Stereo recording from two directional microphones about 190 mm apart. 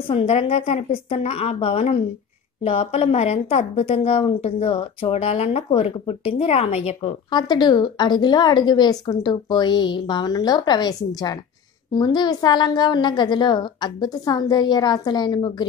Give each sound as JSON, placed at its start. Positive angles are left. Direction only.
{"t": 0.1, "sound": "a woman's voice", "side_deg": 30}